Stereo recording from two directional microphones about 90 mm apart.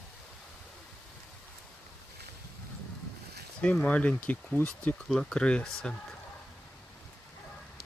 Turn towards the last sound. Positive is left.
turn(degrees=10)  # may be behind; listen again after turning